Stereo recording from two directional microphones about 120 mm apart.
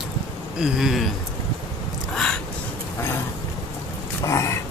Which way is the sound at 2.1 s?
5° left (ahead or behind).